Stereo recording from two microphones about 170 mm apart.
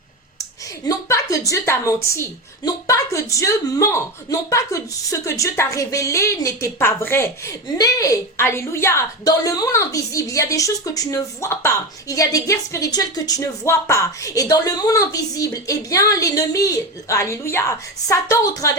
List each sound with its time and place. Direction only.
0.9 s a woman's voice: 20° left (ahead or behind)